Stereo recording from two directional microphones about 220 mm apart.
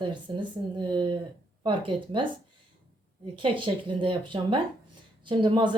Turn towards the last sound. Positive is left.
turn(degrees=-20)  # may be behind; listen again after turning